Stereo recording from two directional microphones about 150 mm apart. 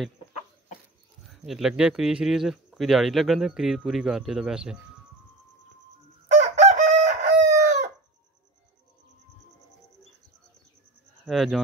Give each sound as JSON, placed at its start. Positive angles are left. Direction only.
{"t": 1.2, "sound": "speech", "side_deg": 0}
{"t": 6.3, "sound": "chicken", "side_deg": -50}
{"t": 11.2, "sound": "speech", "side_deg": 0}